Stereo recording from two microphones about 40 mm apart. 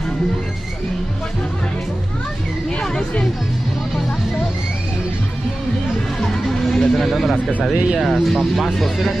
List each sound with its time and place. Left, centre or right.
2.8 s music: centre
6.2 s music: centre
7.7 s speech: centre
8.0 s speech: centre